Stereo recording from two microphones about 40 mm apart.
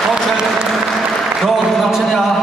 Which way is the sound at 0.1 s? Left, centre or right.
Centre.